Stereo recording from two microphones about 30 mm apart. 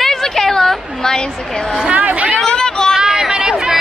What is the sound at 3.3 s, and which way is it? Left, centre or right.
Chatter, right.